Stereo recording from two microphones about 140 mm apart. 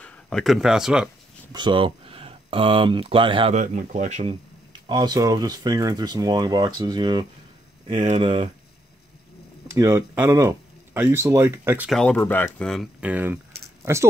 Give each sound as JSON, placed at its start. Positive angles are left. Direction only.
{"t": 0.0, "sound": "speech", "side_deg": 5}
{"t": 1.5, "sound": "speech", "side_deg": -35}
{"t": 3.5, "sound": "speech", "side_deg": -65}
{"t": 4.8, "sound": "speech", "side_deg": -30}
{"t": 7.9, "sound": "speech", "side_deg": -60}
{"t": 9.7, "sound": "speech", "side_deg": -20}
{"t": 11.9, "sound": "speech", "side_deg": 5}
{"t": 12.5, "sound": "speech", "side_deg": 5}
{"t": 13.0, "sound": "speech", "side_deg": -10}